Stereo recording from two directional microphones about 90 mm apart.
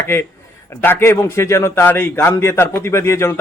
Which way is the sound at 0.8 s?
25° left (ahead or behind).